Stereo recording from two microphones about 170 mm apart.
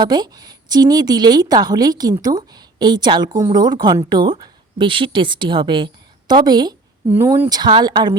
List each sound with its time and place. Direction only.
0.0 s a woman's voice: 25° right (ahead or behind)